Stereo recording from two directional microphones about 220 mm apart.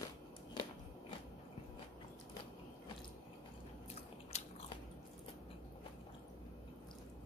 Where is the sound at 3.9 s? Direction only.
30° left (ahead or behind).